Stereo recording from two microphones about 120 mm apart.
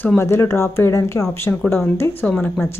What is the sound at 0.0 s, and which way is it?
Speech, 20° left (ahead or behind).